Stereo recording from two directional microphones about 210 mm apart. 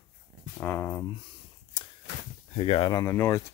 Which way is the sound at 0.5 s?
10° left (ahead or behind).